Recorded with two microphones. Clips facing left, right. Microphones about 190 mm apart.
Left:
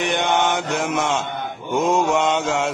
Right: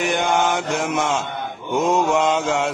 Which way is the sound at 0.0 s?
Centre (ahead or behind).